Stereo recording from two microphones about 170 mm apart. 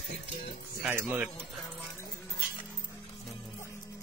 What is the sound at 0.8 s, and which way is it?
Speech, 10° right (ahead or behind).